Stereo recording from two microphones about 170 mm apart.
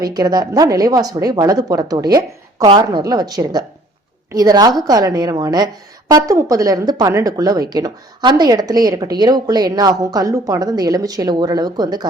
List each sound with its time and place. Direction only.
0.0 s speech: 25° right (ahead or behind)